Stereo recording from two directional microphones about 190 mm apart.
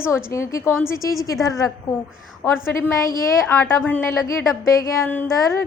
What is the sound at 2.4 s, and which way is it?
A woman's voice, 10° left (ahead or behind).